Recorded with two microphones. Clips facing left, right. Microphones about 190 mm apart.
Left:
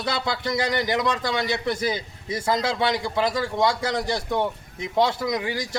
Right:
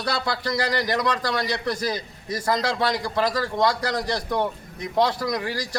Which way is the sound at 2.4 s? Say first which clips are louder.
Even; 5° left (ahead or behind).